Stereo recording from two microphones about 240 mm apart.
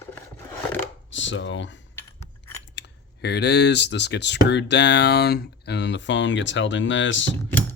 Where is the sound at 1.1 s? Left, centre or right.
Left.